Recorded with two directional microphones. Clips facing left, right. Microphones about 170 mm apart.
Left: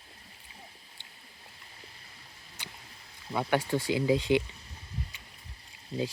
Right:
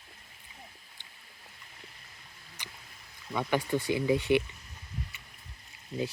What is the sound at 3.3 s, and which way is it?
Speech, 30° left (ahead or behind).